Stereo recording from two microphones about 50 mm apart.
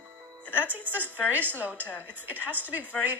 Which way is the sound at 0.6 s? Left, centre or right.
Right.